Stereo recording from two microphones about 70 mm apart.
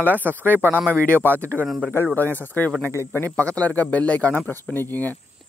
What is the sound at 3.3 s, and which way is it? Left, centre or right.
Speech, centre.